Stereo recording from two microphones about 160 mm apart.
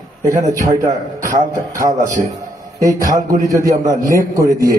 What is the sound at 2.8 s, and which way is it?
A man's voice, 20° right (ahead or behind).